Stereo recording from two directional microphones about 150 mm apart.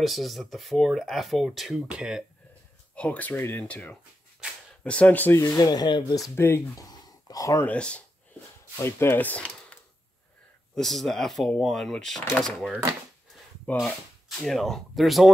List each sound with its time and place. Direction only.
0.0 s speech: centre (ahead or behind)
3.0 s speech: 10° left (ahead or behind)
5.4 s speech: 25° left (ahead or behind)
6.3 s speech: 15° left (ahead or behind)
6.9 s a sound: 25° left (ahead or behind)
7.6 s speech: 10° left (ahead or behind)